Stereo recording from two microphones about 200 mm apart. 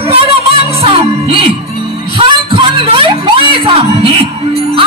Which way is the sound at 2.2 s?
25° right (ahead or behind).